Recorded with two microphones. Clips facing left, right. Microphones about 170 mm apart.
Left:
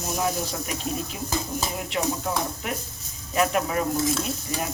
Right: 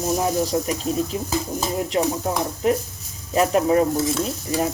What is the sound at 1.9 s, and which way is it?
Speech, 35° right (ahead or behind).